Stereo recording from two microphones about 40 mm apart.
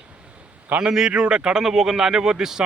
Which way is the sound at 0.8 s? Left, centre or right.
Right.